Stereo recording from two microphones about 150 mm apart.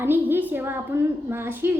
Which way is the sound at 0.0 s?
15° right (ahead or behind).